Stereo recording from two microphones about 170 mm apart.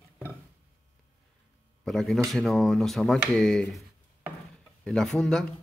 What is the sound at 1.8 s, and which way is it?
Speech, centre (ahead or behind).